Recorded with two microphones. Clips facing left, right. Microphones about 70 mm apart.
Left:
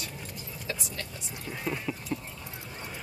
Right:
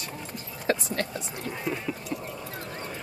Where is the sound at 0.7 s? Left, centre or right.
Right.